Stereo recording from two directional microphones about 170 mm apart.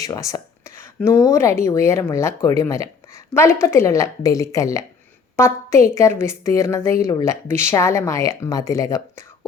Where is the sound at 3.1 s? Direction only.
15° left (ahead or behind).